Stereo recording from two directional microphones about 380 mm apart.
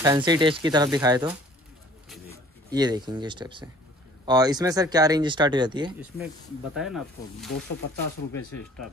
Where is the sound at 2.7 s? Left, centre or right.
Centre.